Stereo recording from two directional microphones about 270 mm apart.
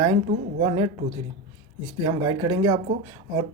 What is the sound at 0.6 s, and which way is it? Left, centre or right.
Speech, right.